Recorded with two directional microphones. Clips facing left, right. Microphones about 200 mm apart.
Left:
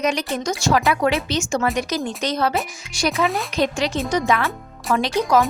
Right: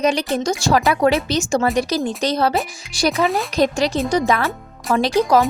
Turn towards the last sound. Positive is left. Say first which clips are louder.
# right 3 dB
turn(degrees=-35)  # may be behind; listen again after turning